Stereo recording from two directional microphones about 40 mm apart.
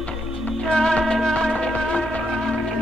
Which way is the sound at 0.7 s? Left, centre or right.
Centre.